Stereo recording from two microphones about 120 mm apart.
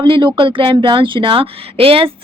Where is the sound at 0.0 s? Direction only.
40° right (ahead or behind).